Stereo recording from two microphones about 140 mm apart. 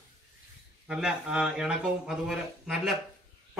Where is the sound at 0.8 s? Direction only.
5° right (ahead or behind).